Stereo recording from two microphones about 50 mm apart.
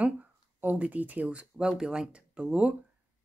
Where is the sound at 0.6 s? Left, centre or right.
Right.